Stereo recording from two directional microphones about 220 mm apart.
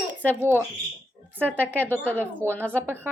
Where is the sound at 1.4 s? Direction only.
5° left (ahead or behind).